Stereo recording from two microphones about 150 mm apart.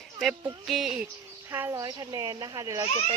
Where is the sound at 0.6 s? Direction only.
Centre (ahead or behind).